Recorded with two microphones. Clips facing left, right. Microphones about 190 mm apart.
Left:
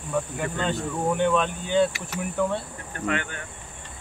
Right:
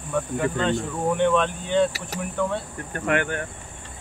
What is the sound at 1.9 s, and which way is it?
Speech, 35° right (ahead or behind).